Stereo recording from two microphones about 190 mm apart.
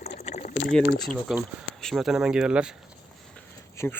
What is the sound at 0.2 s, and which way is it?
Liquid, 40° left (ahead or behind).